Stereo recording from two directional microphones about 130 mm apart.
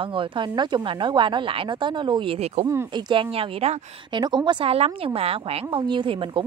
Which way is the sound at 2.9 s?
40° right (ahead or behind).